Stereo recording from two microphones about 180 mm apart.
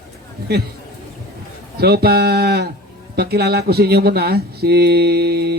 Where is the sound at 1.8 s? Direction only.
60° right (ahead or behind).